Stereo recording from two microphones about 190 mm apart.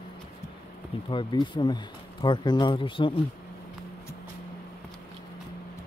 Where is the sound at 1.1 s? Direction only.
25° left (ahead or behind).